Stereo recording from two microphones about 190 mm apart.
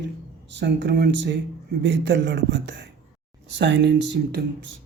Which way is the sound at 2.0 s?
65° right (ahead or behind).